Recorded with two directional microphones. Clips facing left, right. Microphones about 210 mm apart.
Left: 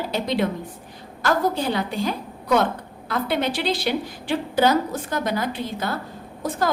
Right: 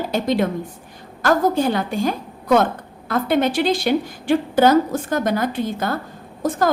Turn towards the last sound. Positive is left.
turn(degrees=-50)  # may be behind; listen again after turning